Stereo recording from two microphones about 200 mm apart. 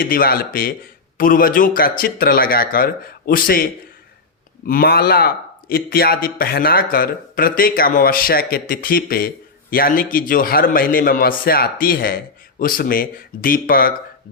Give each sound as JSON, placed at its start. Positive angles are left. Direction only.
{"t": 0.0, "sound": "a man's voice", "side_deg": 45}